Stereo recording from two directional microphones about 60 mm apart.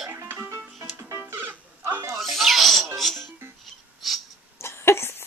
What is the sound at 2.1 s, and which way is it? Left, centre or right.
Music, centre.